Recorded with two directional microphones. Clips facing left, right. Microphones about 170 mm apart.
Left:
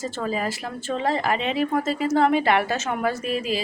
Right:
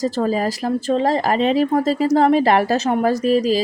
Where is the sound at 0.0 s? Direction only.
40° right (ahead or behind).